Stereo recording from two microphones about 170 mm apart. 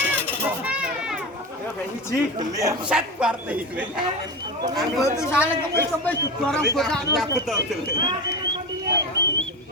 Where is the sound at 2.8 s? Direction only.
5° right (ahead or behind).